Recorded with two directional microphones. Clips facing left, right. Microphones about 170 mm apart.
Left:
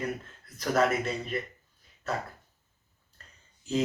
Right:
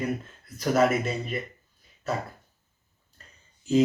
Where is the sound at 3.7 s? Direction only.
Centre (ahead or behind).